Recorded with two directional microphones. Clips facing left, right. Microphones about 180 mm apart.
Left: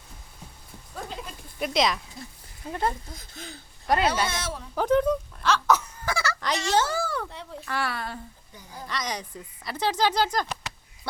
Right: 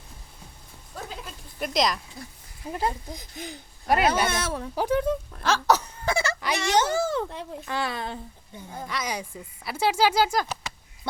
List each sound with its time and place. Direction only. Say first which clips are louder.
1.0 s sheep: left 1 dB; centre (ahead or behind)
2.6 s speech: even; 10° right (ahead or behind)
4.1 s speech: right 3 dB; 55° right (ahead or behind)
4.7 s speech: left 3 dB; 10° right (ahead or behind)
5.4 s wail: right 2 dB; 40° right (ahead or behind)
6.1 s fowl: right 3 dB; 25° right (ahead or behind)
6.7 s a child's voice: right 3 dB; 20° right (ahead or behind)
8.9 s speech: even; 10° right (ahead or behind)